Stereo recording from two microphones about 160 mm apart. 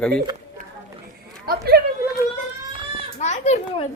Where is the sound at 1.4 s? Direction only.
80° right.